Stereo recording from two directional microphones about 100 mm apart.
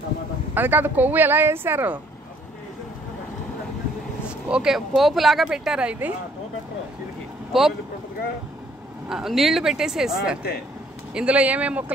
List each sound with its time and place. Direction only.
0.6 s speech: 20° right (ahead or behind)
4.5 s speech: 5° right (ahead or behind)
7.5 s speech: centre (ahead or behind)
9.1 s speech: 5° right (ahead or behind)